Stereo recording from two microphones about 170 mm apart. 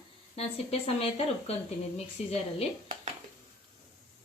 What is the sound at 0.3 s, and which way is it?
Speech, 35° left (ahead or behind).